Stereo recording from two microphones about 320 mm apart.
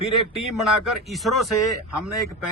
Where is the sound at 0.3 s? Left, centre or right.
Centre.